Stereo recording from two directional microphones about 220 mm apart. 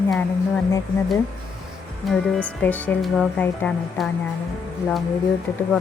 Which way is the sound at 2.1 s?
5° left (ahead or behind).